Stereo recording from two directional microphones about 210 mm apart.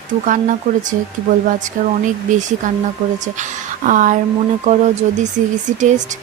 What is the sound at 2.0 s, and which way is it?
Speech, 35° right (ahead or behind).